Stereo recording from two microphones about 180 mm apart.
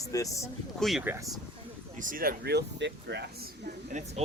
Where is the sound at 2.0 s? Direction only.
50° right (ahead or behind); by 3.3 s 70° right (ahead or behind).